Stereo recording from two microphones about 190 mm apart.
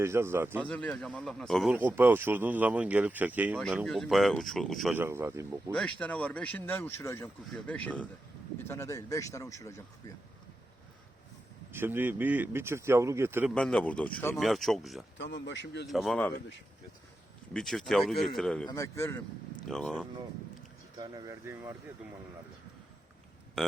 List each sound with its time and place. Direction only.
0.0 s speech: 15° right (ahead or behind)
0.6 s speech: 5° left (ahead or behind)
1.7 s speech: 10° right (ahead or behind)
4.9 s speech: 10° right (ahead or behind)
5.7 s speech: 5° left (ahead or behind)
11.7 s speech: 10° right (ahead or behind)
13.5 s speech: 5° left (ahead or behind)
15.2 s speech: 70° left (ahead or behind)
15.9 s speech: centre (ahead or behind)
17.5 s speech: centre (ahead or behind)
18.7 s speech: 15° left (ahead or behind)
19.6 s speech: centre (ahead or behind)
21.0 s speech: 20° right (ahead or behind)
23.6 s burping: centre (ahead or behind)